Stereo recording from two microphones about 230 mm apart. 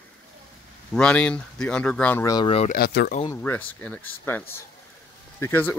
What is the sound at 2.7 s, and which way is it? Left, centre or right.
Speech, left.